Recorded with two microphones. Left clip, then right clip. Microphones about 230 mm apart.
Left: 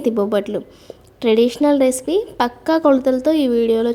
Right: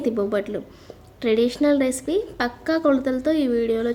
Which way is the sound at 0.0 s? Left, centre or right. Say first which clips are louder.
Left 5 dB; left.